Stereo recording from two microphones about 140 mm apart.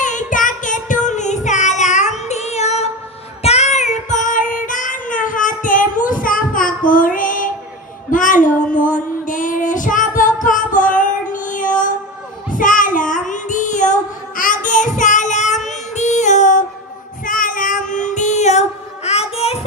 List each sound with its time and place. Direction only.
0.0 s child singing: 65° left (ahead or behind)
6.9 s music: 75° left (ahead or behind)
8.1 s child singing: 70° left (ahead or behind)
15.7 s music: 55° left (ahead or behind)
17.2 s child singing: 75° left (ahead or behind); by 19.6 s 45° left (ahead or behind)